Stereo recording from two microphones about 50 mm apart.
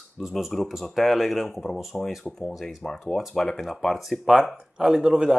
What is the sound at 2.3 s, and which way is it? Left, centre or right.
Speech, centre.